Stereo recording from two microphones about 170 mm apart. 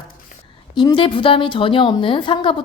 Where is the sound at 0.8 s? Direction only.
30° left (ahead or behind).